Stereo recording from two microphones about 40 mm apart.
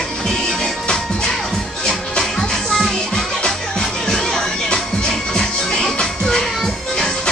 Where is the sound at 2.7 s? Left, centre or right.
Centre.